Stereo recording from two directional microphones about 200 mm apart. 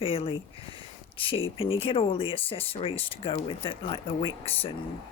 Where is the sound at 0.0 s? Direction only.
30° left (ahead or behind).